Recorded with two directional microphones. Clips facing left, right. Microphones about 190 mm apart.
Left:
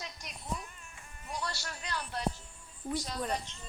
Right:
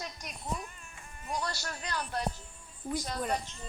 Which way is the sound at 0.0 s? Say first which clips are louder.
Right 3 dB; 50° right (ahead or behind).